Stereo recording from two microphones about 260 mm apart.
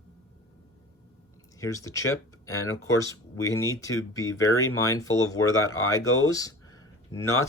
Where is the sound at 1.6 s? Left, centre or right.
Centre.